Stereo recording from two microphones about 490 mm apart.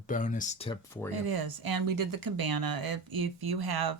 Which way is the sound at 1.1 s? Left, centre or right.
Right.